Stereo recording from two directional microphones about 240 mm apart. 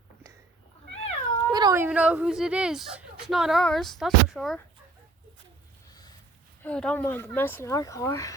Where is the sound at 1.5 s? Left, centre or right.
Centre.